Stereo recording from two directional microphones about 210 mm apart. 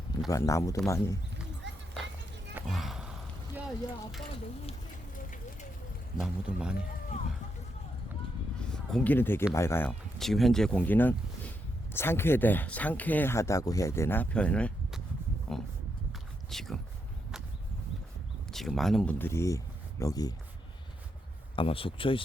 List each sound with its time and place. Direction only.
0.3 s speech: 15° left (ahead or behind)
1.6 s music: 60° right (ahead or behind)
2.6 s a sound: centre (ahead or behind)
6.1 s speech: 5° right (ahead or behind)
8.7 s speech: 5° left (ahead or behind)
18.5 s speech: centre (ahead or behind); by 20.3 s 15° left (ahead or behind)
21.5 s speech: 25° left (ahead or behind)